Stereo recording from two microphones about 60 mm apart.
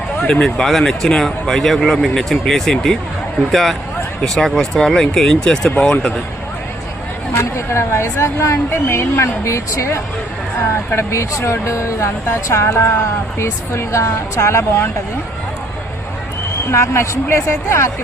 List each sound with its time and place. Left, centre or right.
0.2 s speech: centre
7.5 s speech: left
8.7 s speech: left
16.7 s speech: left